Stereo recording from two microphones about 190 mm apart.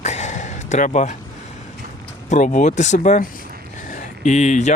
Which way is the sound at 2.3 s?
40° left (ahead or behind).